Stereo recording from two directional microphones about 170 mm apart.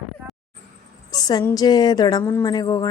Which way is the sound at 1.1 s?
20° left (ahead or behind).